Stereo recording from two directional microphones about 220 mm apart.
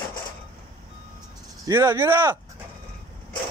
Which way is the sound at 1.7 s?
10° right (ahead or behind).